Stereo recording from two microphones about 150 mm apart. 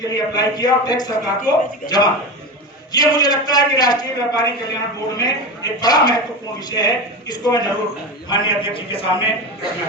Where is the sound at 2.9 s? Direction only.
25° left (ahead or behind).